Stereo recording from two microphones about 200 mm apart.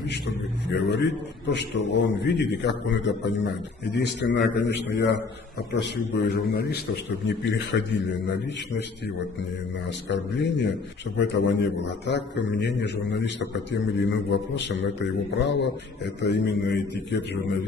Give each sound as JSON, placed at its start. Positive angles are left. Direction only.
{"t": 0.7, "sound": "a man's voice", "side_deg": 60}
{"t": 7.2, "sound": "a man's voice", "side_deg": 65}
{"t": 10.0, "sound": "a man's voice", "side_deg": 60}